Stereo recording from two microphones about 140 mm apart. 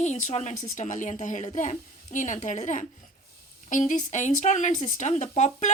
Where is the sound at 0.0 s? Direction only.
55° left (ahead or behind).